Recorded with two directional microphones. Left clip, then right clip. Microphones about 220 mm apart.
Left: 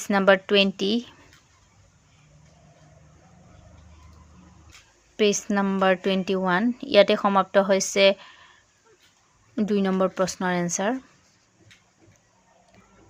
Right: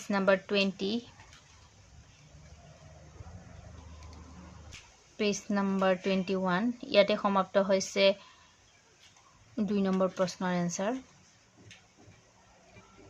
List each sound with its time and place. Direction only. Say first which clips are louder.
0.0 s speech: left 8 dB; 40° left (ahead or behind)
5.1 s speech: left 9 dB; 40° left (ahead or behind)
9.6 s speech: left 7 dB; 35° left (ahead or behind)